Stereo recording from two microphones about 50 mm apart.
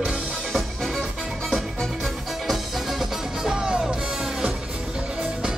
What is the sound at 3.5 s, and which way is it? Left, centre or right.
Music, centre.